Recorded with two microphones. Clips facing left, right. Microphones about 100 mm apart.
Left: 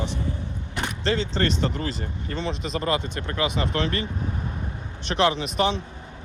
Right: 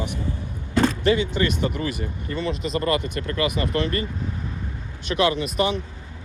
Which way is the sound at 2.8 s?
55° right (ahead or behind).